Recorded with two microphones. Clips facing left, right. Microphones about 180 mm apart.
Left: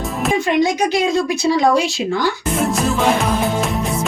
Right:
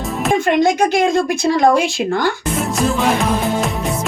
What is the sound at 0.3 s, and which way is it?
A woman's voice, 50° right (ahead or behind).